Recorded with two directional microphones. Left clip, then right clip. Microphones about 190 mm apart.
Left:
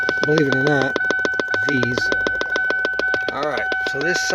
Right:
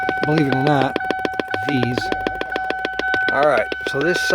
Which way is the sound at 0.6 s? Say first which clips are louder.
Even; 25° right (ahead or behind).